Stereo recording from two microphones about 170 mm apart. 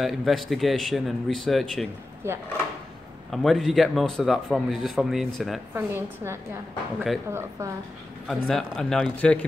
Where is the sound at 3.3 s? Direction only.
Centre (ahead or behind).